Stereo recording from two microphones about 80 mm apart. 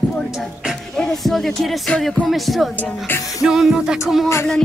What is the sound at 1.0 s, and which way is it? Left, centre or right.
Speech, centre.